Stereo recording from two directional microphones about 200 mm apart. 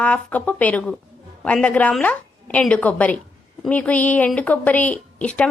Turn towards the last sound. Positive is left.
turn(degrees=5)  # may be behind; listen again after turning